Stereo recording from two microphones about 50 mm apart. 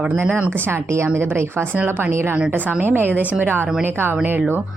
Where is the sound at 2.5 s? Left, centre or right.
Right.